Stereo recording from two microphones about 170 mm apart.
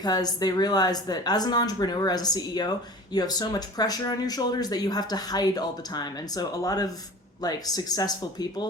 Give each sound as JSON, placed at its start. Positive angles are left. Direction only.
{"t": 0.0, "sound": "speech", "side_deg": 25}